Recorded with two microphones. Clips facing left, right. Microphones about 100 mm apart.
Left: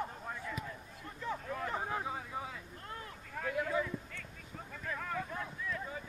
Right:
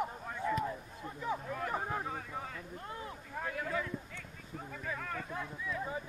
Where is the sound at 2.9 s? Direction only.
20° right (ahead or behind).